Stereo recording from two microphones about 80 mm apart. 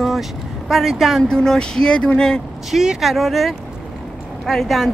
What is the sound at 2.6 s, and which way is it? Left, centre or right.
Speech, centre.